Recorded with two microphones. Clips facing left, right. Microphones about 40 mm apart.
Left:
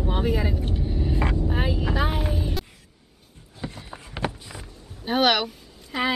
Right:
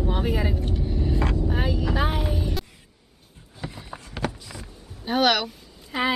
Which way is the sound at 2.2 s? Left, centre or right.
Centre.